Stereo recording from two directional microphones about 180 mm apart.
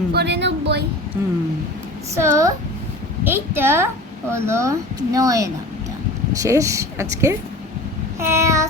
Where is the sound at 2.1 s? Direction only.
15° right (ahead or behind).